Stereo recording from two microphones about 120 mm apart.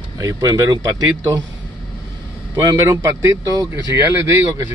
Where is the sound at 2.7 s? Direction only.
20° right (ahead or behind).